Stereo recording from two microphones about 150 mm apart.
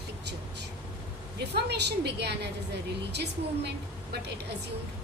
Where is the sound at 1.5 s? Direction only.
90° right.